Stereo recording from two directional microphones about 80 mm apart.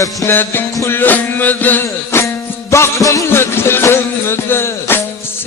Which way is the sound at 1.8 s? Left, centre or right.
Left.